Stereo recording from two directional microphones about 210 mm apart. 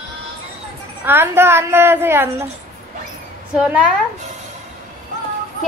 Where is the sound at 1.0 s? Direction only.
10° right (ahead or behind).